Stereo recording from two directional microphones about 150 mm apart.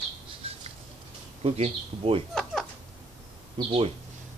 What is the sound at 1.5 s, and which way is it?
Speech, 45° right (ahead or behind).